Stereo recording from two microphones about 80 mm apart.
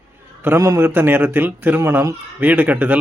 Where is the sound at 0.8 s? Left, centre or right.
Right.